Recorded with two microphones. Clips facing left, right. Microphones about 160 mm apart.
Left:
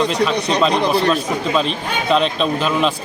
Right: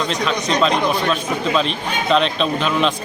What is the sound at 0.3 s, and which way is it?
Speech, 35° left (ahead or behind).